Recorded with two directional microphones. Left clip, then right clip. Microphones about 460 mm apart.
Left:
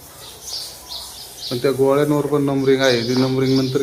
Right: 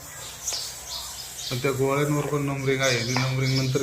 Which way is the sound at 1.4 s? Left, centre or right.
Centre.